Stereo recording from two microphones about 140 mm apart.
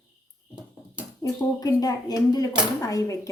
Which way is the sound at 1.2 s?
25° left (ahead or behind).